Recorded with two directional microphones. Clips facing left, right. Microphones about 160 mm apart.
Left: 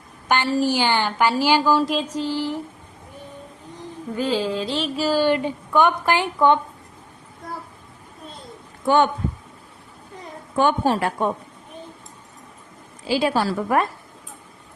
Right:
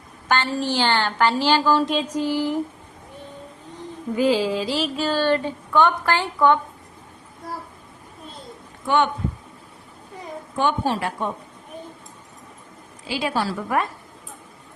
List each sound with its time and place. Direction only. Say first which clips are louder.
0.3 s a woman's voice: left 3 dB; 10° left (ahead or behind)
2.1 s a sound: right 2 dB; 15° right (ahead or behind)
4.1 s a sound: right 3 dB; 10° right (ahead or behind)
4.9 s a woman's voice: left 3 dB; 5° left (ahead or behind)
10.6 s a woman's voice: left 3 dB; 45° left (ahead or behind)
13.1 s a woman's voice: left 4 dB; 40° left (ahead or behind)